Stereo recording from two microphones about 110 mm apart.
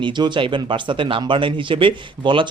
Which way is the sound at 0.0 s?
45° right (ahead or behind).